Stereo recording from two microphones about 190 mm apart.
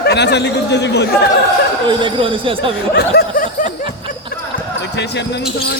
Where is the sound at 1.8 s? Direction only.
25° right (ahead or behind).